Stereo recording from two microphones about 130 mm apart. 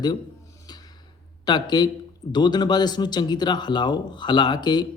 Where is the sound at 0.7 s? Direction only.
30° left (ahead or behind).